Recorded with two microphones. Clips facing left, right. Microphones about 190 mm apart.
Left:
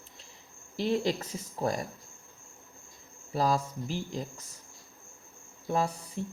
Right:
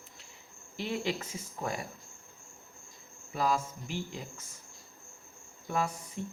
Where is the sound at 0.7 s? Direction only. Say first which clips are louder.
Left 5 dB; 35° left (ahead or behind).